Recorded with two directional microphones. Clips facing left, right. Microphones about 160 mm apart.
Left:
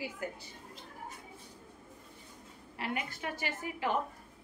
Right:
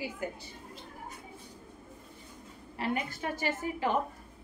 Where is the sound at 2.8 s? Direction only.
35° right (ahead or behind).